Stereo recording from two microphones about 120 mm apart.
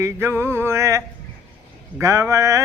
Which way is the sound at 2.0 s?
25° right (ahead or behind).